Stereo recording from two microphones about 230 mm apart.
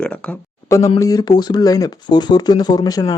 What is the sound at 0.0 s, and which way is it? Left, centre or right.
Speech, centre.